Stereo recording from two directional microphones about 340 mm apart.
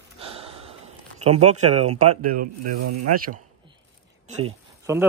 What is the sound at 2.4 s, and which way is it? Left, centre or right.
Speech, right.